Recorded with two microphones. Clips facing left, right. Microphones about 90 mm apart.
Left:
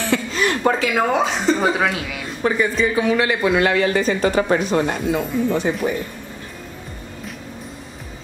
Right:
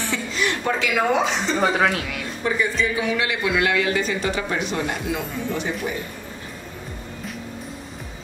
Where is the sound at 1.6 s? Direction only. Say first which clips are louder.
Left 1 dB; centre (ahead or behind).